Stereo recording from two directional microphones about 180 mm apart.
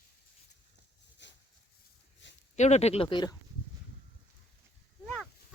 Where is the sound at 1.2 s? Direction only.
75° left (ahead or behind).